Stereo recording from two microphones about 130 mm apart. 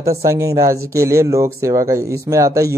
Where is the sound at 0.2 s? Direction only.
25° right (ahead or behind).